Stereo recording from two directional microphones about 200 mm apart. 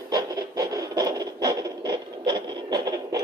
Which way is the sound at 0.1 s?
20° right (ahead or behind).